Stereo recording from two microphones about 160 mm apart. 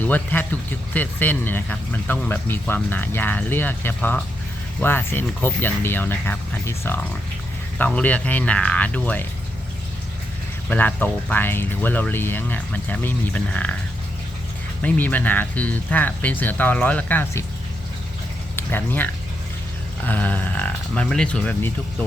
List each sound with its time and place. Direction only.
0.0 s speech: 10° left (ahead or behind)
10.7 s speech: 10° left (ahead or behind)
14.8 s speech: 10° left (ahead or behind)
18.5 s a sound: 10° left (ahead or behind)
20.1 s speech: 10° left (ahead or behind)